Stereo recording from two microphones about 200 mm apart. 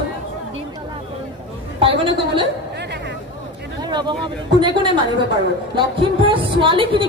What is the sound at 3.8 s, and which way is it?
A woman's voice, 20° right (ahead or behind).